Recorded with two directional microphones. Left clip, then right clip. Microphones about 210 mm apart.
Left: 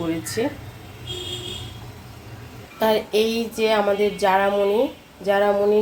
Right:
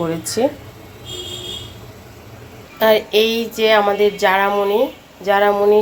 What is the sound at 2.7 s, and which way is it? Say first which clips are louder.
Speech: right 6 dB; 5° right (ahead or behind).